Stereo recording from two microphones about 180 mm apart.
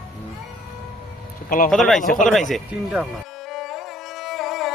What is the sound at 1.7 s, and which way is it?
Speech, centre (ahead or behind).